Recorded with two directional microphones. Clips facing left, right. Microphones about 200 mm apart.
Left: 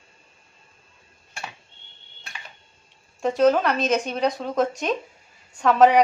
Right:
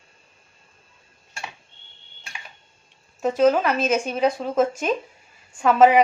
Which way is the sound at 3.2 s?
5° right (ahead or behind).